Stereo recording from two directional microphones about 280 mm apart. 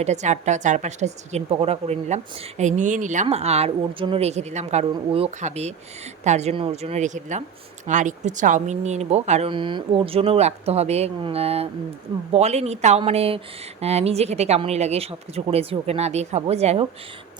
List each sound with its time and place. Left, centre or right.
0.0 s a woman's voice: right